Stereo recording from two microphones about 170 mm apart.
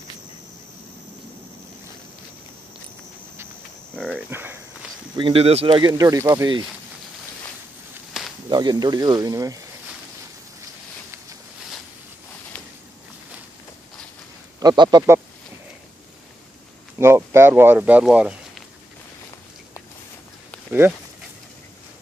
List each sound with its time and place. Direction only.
4.1 s speech: 10° right (ahead or behind)
5.1 s speech: 30° right (ahead or behind)
5.8 s speech: 25° right (ahead or behind)
8.2 s a sound: centre (ahead or behind)
8.5 s speech: 25° right (ahead or behind)
14.6 s speech: 25° right (ahead or behind)
17.0 s speech: 15° right (ahead or behind)
20.8 s speech: 15° right (ahead or behind)